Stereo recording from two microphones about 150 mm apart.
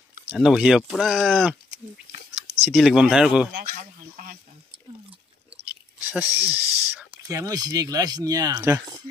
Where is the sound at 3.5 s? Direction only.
70° right (ahead or behind).